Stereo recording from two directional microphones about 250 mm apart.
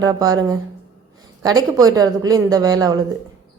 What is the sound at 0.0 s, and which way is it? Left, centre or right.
A woman's voice, centre.